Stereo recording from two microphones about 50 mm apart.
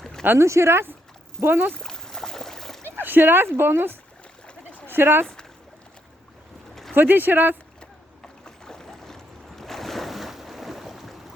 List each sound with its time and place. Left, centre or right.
0.0 s a sound: centre
0.3 s speech: right
1.5 s speech: right
1.8 s boat: centre
2.8 s speech: right
4.4 s a sound: left
4.9 s speech: right
5.2 s a sound: centre
6.9 s speech: right
7.8 s boat: centre